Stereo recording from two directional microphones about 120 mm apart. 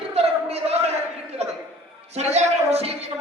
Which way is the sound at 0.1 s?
60° right (ahead or behind).